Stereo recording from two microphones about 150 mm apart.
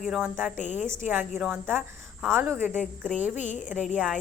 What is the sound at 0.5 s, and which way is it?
Speech, 55° left (ahead or behind).